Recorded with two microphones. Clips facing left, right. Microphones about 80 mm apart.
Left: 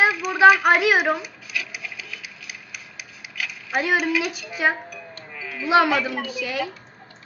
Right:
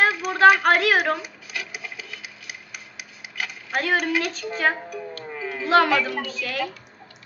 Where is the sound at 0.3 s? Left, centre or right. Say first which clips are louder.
Left 1 dB; centre.